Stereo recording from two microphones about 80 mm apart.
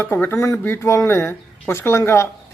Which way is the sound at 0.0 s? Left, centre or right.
Left.